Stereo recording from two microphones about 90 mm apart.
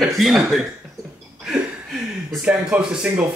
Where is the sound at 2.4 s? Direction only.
10° right (ahead or behind).